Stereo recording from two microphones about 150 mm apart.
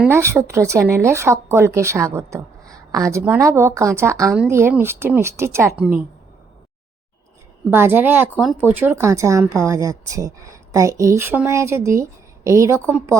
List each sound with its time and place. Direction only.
0.1 s a woman's voice: 15° right (ahead or behind)
7.7 s a woman's voice: 15° right (ahead or behind)